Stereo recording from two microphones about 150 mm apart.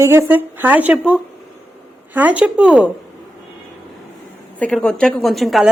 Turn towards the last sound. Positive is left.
turn(degrees=0)  # may be behind; listen again after turning